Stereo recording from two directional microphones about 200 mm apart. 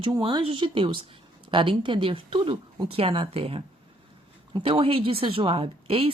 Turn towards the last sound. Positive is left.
turn(degrees=-25)  # may be behind; listen again after turning